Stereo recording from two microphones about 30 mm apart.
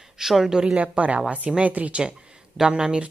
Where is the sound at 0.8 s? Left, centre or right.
Right.